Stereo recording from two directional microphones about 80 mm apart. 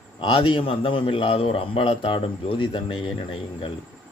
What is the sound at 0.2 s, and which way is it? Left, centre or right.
Speech, left.